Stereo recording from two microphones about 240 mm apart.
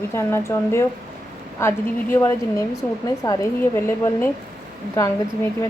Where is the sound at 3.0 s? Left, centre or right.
Centre.